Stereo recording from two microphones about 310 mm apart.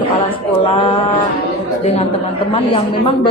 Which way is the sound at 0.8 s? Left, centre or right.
Centre.